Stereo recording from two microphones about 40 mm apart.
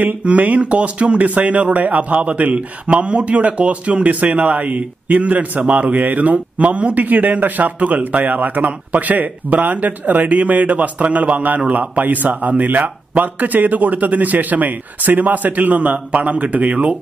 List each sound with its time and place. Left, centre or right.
0.2 s a man's voice: right